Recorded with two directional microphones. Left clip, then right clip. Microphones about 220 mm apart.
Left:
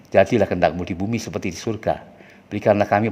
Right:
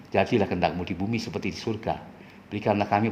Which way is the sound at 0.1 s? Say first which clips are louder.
Left 7 dB; 45° left (ahead or behind).